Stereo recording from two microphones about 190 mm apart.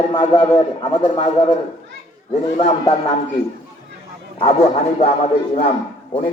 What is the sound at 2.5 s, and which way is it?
Speech, 30° left (ahead or behind).